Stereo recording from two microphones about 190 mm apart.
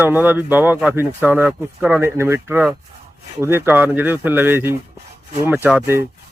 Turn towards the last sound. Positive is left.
turn(degrees=-10)  # may be behind; listen again after turning